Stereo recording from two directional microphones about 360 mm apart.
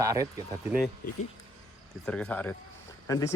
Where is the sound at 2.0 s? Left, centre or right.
Centre.